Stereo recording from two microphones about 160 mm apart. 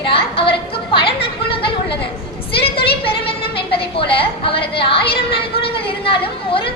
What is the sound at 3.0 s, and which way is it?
A woman's voice, 35° left (ahead or behind).